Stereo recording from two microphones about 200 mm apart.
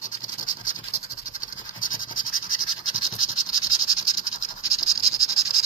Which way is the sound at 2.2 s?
90° left.